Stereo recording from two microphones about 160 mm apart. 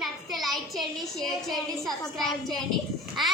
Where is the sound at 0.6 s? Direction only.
Centre (ahead or behind).